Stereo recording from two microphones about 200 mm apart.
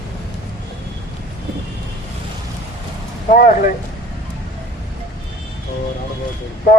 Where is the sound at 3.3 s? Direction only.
40° left (ahead or behind).